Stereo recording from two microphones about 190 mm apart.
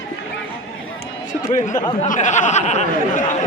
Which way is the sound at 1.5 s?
40° left (ahead or behind).